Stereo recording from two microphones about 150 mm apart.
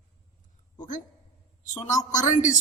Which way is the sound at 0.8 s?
60° left (ahead or behind).